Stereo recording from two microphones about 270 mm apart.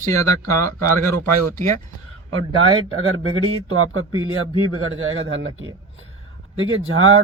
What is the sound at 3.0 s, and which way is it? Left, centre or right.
A man's voice, right.